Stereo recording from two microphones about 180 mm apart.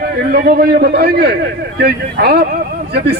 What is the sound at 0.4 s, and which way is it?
Speech, 55° right (ahead or behind).